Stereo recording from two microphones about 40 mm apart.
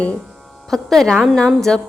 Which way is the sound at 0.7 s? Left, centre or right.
Centre.